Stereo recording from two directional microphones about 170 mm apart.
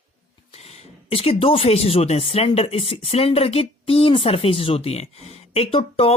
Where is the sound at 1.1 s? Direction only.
35° left (ahead or behind).